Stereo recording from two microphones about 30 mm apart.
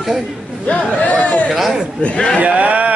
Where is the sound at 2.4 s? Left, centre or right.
Right.